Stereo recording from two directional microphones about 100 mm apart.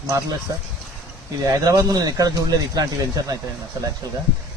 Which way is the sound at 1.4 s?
35° right (ahead or behind).